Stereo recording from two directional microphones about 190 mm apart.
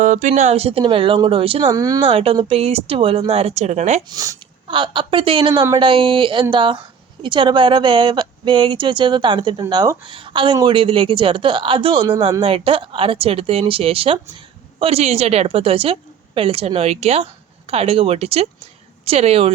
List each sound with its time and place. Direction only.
0.0 s speech: 40° right (ahead or behind)
1.7 s a woman's voice: 20° right (ahead or behind); by 4.0 s 40° right (ahead or behind)
4.1 s a woman's voice: 20° right (ahead or behind)